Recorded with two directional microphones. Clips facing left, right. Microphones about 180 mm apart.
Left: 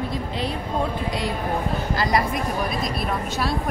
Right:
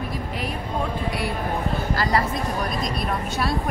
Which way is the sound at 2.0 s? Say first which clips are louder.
Left 1 dB; 15° left (ahead or behind).